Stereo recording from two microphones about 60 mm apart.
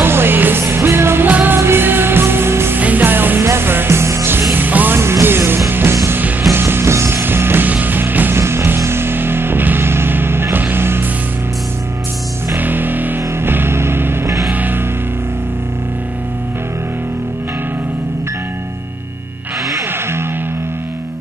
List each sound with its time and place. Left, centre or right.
0.0 s music: right
1.3 s music: right
1.6 s music: right
2.8 s music: right
4.9 s music: right
8.4 s music: right
12.5 s music: right
14.5 s music: right